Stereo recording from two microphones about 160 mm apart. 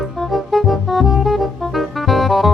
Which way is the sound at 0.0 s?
Centre (ahead or behind).